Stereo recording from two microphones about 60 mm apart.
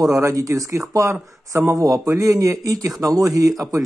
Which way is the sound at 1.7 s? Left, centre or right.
Right.